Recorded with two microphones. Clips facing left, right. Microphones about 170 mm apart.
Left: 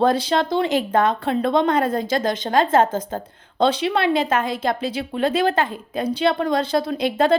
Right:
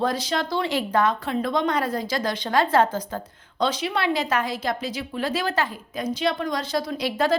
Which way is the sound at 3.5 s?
30° left (ahead or behind).